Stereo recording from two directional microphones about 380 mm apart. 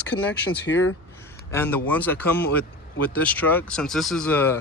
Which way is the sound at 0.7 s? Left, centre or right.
Left.